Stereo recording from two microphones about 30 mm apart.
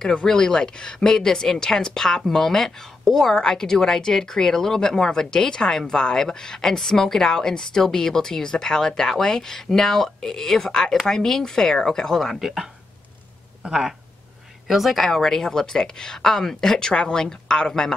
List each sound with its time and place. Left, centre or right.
0.3 s a woman's voice: left
3.3 s a woman's voice: left
13.7 s speech: centre
14.7 s a woman's voice: centre; by 17.9 s left